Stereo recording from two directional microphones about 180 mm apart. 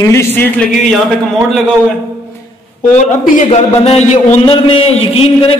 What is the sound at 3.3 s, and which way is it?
A man's voice, 40° left (ahead or behind).